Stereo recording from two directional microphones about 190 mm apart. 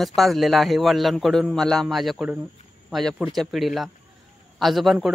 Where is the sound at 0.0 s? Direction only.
Centre (ahead or behind).